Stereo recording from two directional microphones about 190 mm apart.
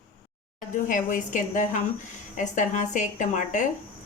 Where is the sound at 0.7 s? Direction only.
45° left (ahead or behind).